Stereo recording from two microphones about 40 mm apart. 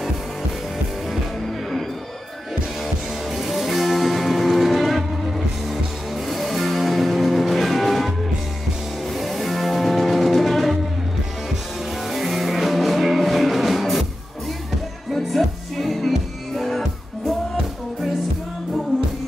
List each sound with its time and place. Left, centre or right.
2.8 s music: centre
9.1 s music: centre
12.1 s music: centre
15.1 s music: centre